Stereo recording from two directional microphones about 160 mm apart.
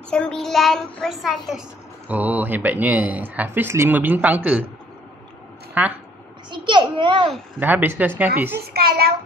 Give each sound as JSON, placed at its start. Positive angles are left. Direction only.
{"t": 0.1, "sound": "a child's voice", "side_deg": 5}
{"t": 5.8, "sound": "speech", "side_deg": -10}
{"t": 6.5, "sound": "a child's voice", "side_deg": -30}
{"t": 7.6, "sound": "speech", "side_deg": -10}
{"t": 8.5, "sound": "a child's voice", "side_deg": -75}